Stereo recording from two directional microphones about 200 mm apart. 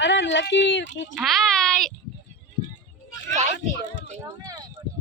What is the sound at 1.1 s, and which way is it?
Speech, centre (ahead or behind).